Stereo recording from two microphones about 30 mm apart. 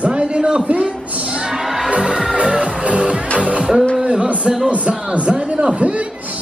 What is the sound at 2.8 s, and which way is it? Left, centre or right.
Music, right.